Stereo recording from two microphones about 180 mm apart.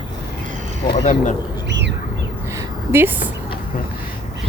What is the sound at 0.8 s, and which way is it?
Speech, 25° left (ahead or behind).